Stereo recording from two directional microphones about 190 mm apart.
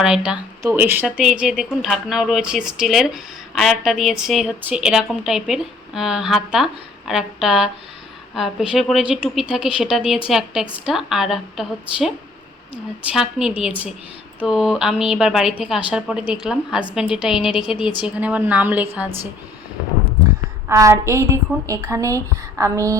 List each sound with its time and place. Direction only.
0.0 s a woman's voice: 5° right (ahead or behind)
20.7 s a woman's voice: 15° right (ahead or behind)